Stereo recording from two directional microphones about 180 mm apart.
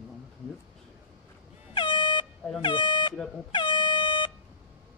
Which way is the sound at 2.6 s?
25° left (ahead or behind).